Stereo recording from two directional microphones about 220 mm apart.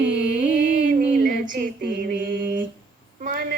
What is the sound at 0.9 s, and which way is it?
Music, 40° right (ahead or behind).